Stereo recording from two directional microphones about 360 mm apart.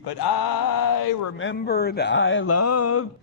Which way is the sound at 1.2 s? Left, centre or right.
Left.